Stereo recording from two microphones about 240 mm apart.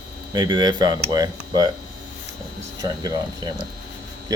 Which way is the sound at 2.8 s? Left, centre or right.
Centre.